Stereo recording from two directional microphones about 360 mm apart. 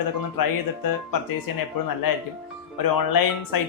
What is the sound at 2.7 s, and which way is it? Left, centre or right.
Speech, left.